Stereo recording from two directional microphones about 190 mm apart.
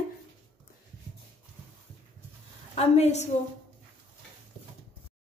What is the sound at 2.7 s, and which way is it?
Speech, 35° left (ahead or behind).